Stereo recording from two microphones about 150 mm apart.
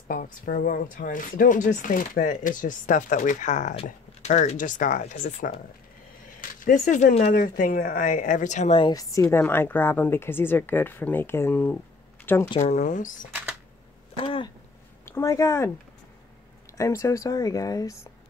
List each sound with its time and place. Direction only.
0.1 s speech: 65° left (ahead or behind)
8.7 s a woman's voice: 25° left (ahead or behind)
12.5 s speech: 50° left (ahead or behind)
14.1 s a sound: 35° left (ahead or behind)
15.0 s speech: 20° left (ahead or behind)
16.7 s speech: 20° left (ahead or behind)